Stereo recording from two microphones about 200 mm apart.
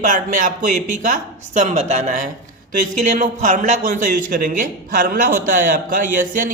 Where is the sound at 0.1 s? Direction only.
40° right (ahead or behind).